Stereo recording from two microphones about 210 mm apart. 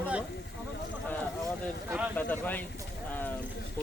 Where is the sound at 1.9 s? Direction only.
5° right (ahead or behind).